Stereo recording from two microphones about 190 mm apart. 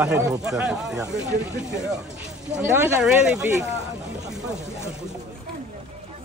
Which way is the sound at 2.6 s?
10° right (ahead or behind).